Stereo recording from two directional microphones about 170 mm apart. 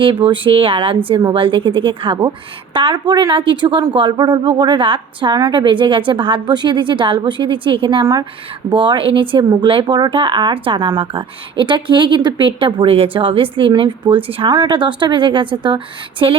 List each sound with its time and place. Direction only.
0.3 s speech: 30° right (ahead or behind)